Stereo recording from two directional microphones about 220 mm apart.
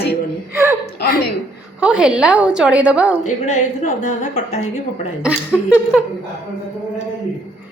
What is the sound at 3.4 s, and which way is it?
A woman's voice, 35° left (ahead or behind).